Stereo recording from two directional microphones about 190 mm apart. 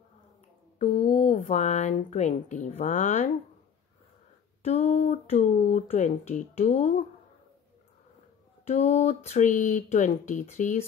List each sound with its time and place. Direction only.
0.7 s a woman's voice: 35° left (ahead or behind)
4.6 s speech: 35° left (ahead or behind)
8.6 s speech: 35° left (ahead or behind)